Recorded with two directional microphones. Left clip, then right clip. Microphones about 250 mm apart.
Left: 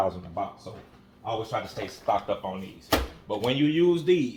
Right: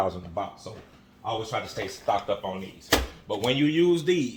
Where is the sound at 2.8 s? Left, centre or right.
Centre.